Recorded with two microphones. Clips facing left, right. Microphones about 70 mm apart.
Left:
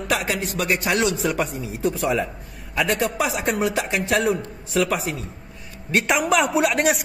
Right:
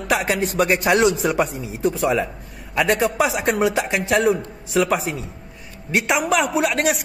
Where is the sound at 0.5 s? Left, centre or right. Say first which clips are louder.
Right 5 dB; right.